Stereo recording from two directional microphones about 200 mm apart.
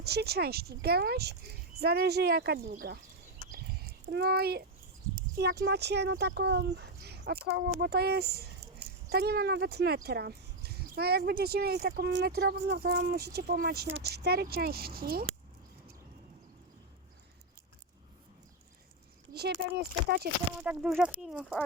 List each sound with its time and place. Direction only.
0.0 s speech: 55° right (ahead or behind)
4.1 s speech: 55° right (ahead or behind)
19.3 s speech: 55° right (ahead or behind)
20.7 s speech: 5° right (ahead or behind)